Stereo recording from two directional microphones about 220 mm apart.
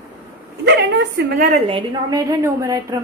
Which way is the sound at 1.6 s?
20° right (ahead or behind).